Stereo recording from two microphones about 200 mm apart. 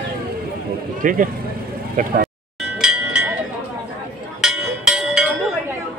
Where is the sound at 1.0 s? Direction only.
40° right (ahead or behind).